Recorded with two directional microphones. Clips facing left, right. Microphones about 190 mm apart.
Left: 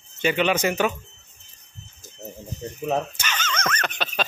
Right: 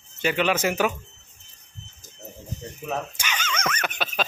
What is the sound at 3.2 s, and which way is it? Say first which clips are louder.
Neigh: left 1 dB; 10° right (ahead or behind).